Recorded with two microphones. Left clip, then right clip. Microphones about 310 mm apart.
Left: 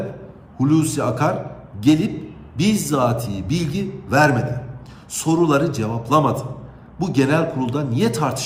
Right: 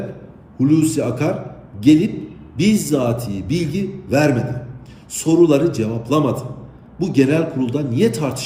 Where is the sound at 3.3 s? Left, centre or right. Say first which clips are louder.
Right 3 dB; left.